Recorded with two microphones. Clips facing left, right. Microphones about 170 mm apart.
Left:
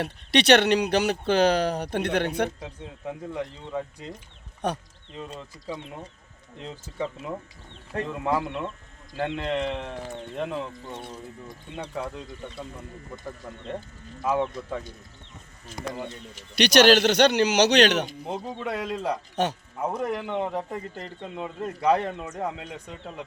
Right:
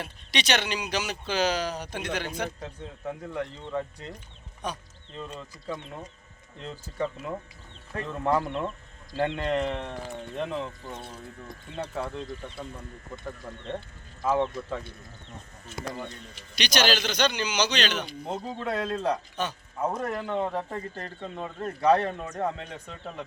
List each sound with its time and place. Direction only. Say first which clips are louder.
0.0 s speech: left 9 dB; 60° left (ahead or behind)
2.6 s speech: even; 15° left (ahead or behind)
4.6 s speech: left 6 dB; 65° left (ahead or behind)
6.7 s speech: right 1 dB; 10° left (ahead or behind)
11.8 s speech: even; centre (ahead or behind)
14.3 s speech: even; 10° left (ahead or behind)
16.6 s a man's voice: left 9 dB; 65° left (ahead or behind)
18.3 s speech: even; 10° left (ahead or behind)
19.4 s a man's voice: left 6 dB; 70° left (ahead or behind)
19.8 s speech: left 1 dB; 10° left (ahead or behind)